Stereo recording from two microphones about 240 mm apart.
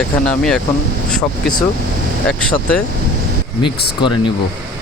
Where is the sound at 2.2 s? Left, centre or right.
Centre.